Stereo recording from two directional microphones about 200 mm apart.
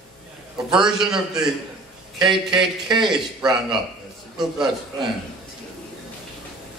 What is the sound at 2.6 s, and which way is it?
Speech, centre (ahead or behind).